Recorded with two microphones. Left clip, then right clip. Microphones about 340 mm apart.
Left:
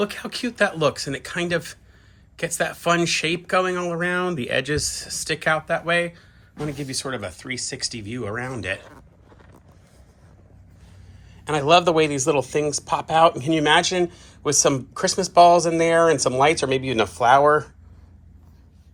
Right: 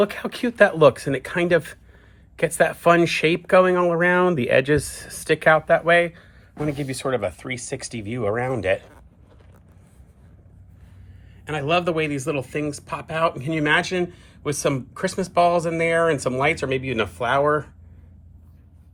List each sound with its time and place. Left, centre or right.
0.0 s speech: centre
11.4 s speech: centre